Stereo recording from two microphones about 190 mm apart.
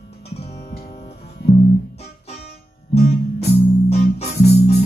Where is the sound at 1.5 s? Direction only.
35° left (ahead or behind).